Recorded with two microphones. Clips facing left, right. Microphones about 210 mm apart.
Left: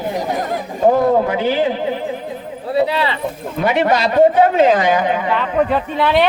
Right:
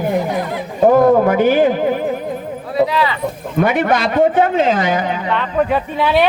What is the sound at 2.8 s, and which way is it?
Speech, 30° left (ahead or behind).